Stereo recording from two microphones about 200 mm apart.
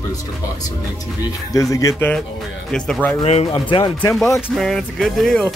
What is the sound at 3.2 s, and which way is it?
Speech, 30° left (ahead or behind).